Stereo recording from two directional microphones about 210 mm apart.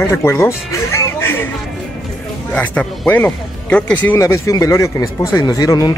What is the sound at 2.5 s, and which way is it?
Speech, 5° left (ahead or behind).